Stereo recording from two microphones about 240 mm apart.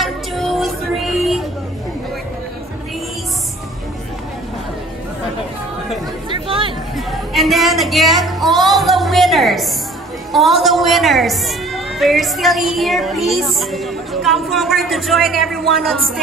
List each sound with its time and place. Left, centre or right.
0.0 s music: centre
6.3 s chatter: right
7.1 s music: centre
10.3 s a woman's voice: centre